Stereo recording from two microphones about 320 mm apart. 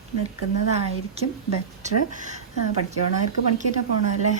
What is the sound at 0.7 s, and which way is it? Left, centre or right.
Speech, centre.